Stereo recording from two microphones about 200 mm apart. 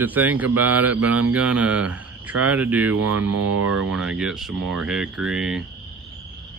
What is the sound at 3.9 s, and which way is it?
Speech, centre (ahead or behind).